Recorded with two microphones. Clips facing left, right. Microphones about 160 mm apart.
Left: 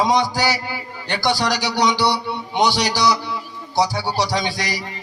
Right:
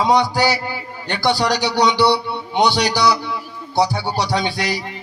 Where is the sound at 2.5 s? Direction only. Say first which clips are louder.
Right 2 dB; 60° right (ahead or behind).